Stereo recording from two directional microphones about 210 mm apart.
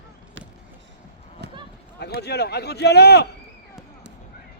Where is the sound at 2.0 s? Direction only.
50° left (ahead or behind).